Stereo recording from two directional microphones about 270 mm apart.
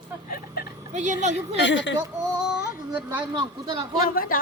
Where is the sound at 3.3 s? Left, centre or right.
Centre.